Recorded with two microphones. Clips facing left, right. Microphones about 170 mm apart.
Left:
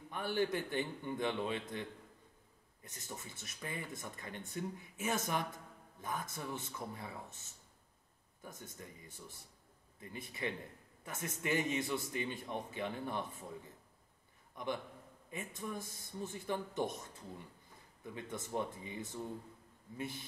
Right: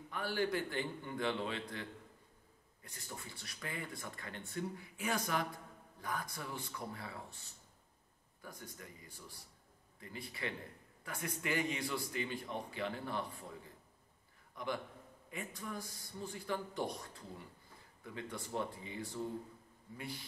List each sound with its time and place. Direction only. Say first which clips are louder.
0.1 s speech: left 1 dB; 20° left (ahead or behind)
14.5 s a man's voice: left 1 dB; 20° left (ahead or behind)